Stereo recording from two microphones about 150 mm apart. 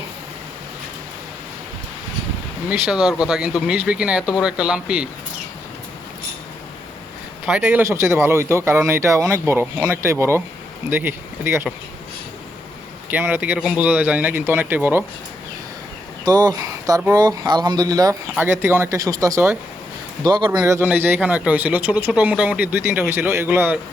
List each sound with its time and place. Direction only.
2.6 s speech: 5° right (ahead or behind)
3.0 s speech: 25° left (ahead or behind)
3.2 s speech: 5° right (ahead or behind)
7.4 s speech: 10° right (ahead or behind)
13.1 s speech: 15° right (ahead or behind)
16.2 s speech: 25° right (ahead or behind)
20.2 s speech: 30° right (ahead or behind); by 23.8 s 15° right (ahead or behind)